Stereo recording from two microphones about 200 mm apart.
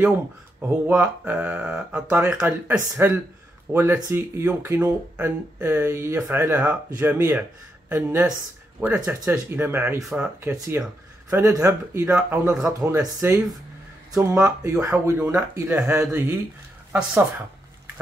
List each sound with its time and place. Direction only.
0.6 s speech: 10° right (ahead or behind)